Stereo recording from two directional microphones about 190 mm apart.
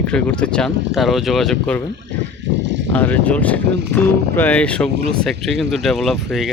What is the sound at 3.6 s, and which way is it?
Speech, 65° right (ahead or behind).